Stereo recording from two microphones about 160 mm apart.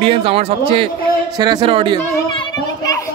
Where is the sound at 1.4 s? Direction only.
25° right (ahead or behind).